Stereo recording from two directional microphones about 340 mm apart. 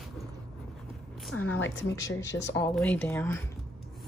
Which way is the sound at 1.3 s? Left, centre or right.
Left.